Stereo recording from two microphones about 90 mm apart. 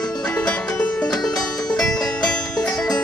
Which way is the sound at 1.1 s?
45° left (ahead or behind).